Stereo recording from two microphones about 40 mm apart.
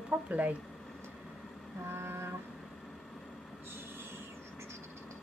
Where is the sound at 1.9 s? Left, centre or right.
Right.